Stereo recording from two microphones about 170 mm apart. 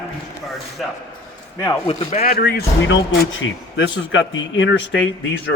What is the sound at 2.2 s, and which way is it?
Speech, 60° left (ahead or behind).